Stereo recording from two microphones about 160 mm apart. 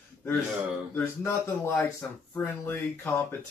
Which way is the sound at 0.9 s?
15° left (ahead or behind).